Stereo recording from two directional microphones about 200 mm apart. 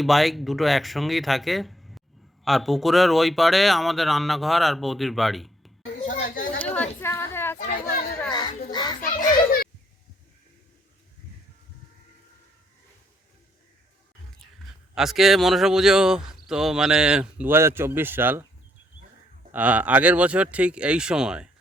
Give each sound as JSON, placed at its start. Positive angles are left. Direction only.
{"t": 0.0, "sound": "speech", "side_deg": 0}
{"t": 6.1, "sound": "chatter", "side_deg": 45}
{"t": 6.6, "sound": "a sound", "side_deg": 5}
{"t": 7.6, "sound": "chatter", "side_deg": 45}
{"t": 8.3, "sound": "a sound", "side_deg": 20}
{"t": 8.7, "sound": "children playing", "side_deg": 20}
{"t": 14.4, "sound": "speech", "side_deg": 0}
{"t": 19.5, "sound": "speech", "side_deg": -10}